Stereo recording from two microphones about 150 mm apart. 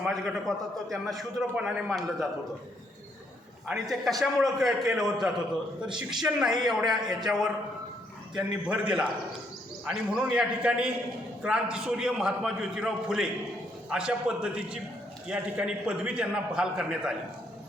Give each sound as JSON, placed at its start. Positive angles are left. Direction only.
{"t": 0.1, "sound": "a man's voice", "side_deg": 0}
{"t": 3.7, "sound": "a man's voice", "side_deg": 0}